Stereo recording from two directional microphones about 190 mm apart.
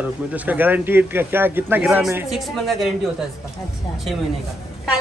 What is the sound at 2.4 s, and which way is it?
Speech, centre (ahead or behind).